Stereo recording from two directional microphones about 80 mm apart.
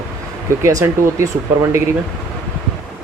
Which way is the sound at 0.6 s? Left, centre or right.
Right.